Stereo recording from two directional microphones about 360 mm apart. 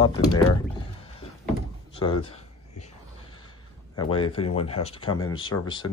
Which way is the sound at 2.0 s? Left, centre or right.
Centre.